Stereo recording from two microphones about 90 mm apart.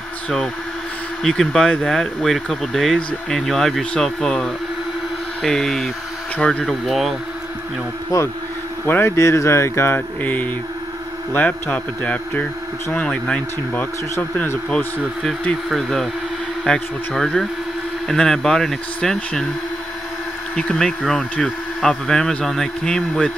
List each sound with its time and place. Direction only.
1.2 s speech: 5° left (ahead or behind)
6.6 s speech: centre (ahead or behind)
8.1 s speech: 40° left (ahead or behind)
8.8 s speech: 25° left (ahead or behind)
14.1 s speech: 30° left (ahead or behind)
15.2 s speech: 5° left (ahead or behind)
20.5 s speech: 10° left (ahead or behind)